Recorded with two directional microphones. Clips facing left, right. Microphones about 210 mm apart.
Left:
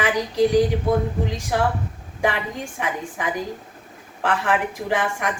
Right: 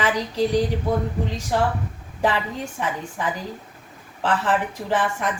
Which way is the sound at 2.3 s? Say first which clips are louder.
Right 1 dB; 15° left (ahead or behind).